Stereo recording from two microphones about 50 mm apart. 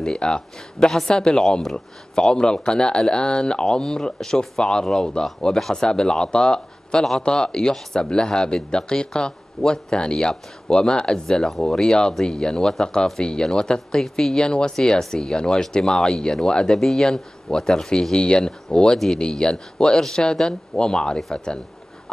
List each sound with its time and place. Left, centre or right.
0.0 s speech: centre